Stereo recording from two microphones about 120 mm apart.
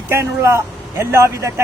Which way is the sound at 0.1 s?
25° right (ahead or behind).